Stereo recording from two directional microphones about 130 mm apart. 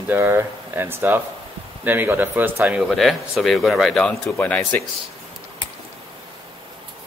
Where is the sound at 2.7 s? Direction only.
Centre (ahead or behind).